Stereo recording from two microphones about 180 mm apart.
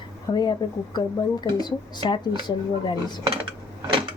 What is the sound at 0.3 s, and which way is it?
Speech, 25° left (ahead or behind).